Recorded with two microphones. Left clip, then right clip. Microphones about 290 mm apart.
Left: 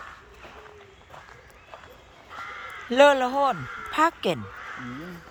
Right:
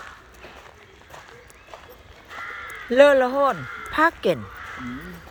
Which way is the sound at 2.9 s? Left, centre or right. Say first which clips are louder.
Right 3 dB; centre.